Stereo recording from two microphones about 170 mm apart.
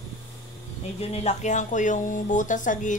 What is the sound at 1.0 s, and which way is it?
A woman's voice, 40° left (ahead or behind).